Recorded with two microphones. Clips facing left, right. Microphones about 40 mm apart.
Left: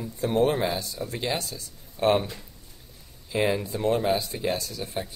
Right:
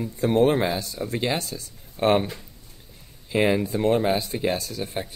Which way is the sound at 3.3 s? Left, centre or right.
Right.